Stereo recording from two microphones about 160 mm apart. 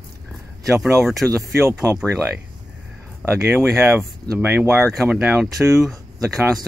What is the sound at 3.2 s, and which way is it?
Speech, 15° right (ahead or behind).